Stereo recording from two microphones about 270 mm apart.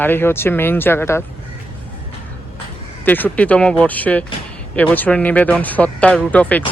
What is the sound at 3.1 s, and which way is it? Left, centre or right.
Speech, centre.